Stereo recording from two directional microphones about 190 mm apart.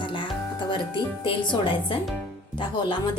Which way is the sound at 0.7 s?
25° left (ahead or behind).